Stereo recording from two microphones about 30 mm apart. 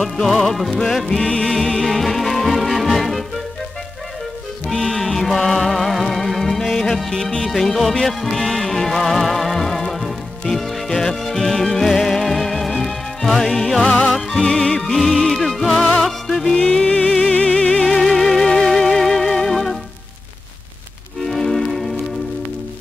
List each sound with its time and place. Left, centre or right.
0.3 s music: centre
0.7 s music: centre
4.6 s music: centre
15.0 s music: centre
16.4 s music: left
17.5 s music: left
17.8 s music: centre
21.3 s music: centre